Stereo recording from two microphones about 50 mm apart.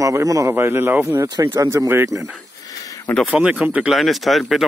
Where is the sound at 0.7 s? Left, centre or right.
Right.